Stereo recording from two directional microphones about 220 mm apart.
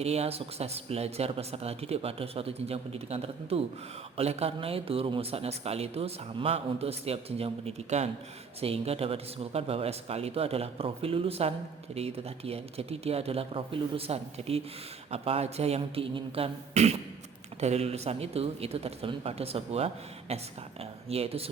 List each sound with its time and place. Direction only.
0.0 s a man's voice: 30° right (ahead or behind)